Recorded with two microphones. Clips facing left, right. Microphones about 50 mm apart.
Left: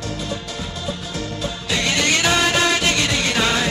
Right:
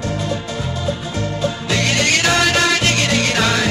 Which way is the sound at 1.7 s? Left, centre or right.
Right.